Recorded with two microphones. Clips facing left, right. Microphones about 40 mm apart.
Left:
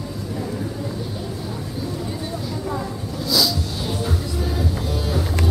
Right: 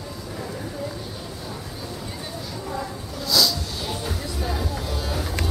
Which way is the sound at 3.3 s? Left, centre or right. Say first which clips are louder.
Left 1 dB; centre.